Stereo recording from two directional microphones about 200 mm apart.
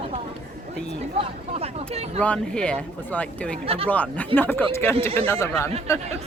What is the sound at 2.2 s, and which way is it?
Speech, 5° left (ahead or behind).